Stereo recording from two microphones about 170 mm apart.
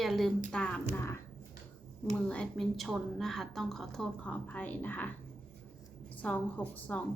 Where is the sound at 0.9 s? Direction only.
15° left (ahead or behind).